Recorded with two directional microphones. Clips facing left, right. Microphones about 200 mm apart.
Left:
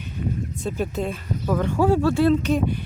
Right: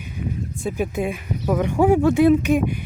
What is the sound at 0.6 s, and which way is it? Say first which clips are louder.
Speech: right 3 dB; 10° right (ahead or behind).